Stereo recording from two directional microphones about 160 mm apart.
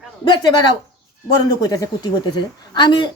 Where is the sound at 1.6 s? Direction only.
25° left (ahead or behind).